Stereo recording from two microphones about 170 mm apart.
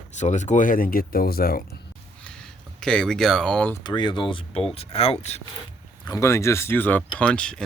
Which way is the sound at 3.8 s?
25° left (ahead or behind).